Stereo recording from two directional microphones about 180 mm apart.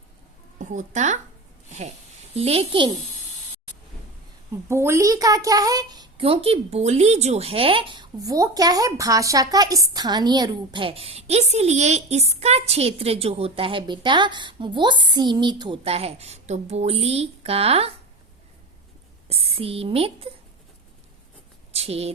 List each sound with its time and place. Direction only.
0.6 s speech: 45° right (ahead or behind)
2.3 s speech: 35° right (ahead or behind)
4.7 s a child's voice: 15° right (ahead or behind); by 17.9 s 35° right (ahead or behind)
19.3 s speech: 30° right (ahead or behind)
21.7 s speech: 35° right (ahead or behind)